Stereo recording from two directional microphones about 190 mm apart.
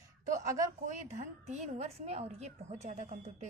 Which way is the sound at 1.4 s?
35° right (ahead or behind).